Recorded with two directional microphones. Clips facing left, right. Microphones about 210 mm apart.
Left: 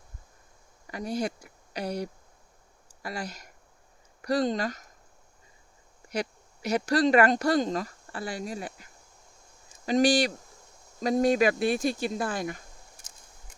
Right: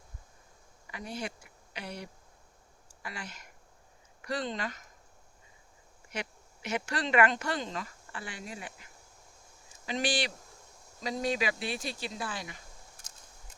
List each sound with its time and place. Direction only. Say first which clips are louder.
0.9 s speech: left 8 dB; 40° left (ahead or behind)
6.1 s speech: left 8 dB; 40° left (ahead or behind)